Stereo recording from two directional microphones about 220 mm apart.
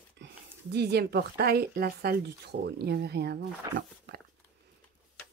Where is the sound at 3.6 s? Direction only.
15° right (ahead or behind).